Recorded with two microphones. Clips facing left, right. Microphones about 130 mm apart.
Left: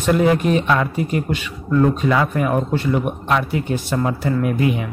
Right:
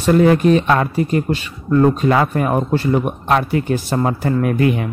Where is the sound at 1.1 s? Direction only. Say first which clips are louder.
Right 3 dB; 35° right (ahead or behind); by 4.8 s 55° right (ahead or behind).